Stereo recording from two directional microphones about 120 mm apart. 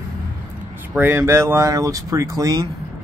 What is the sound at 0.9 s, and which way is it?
Speech, 20° right (ahead or behind).